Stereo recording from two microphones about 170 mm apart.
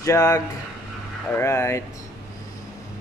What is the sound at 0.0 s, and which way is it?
Speech, 20° left (ahead or behind).